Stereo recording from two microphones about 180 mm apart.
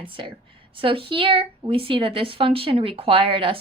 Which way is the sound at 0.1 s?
30° right (ahead or behind).